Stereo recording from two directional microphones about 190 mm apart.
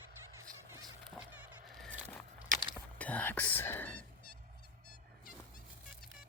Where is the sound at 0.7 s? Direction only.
20° right (ahead or behind).